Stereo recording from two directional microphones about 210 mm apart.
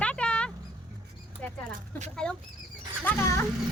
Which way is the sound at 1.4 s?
10° left (ahead or behind).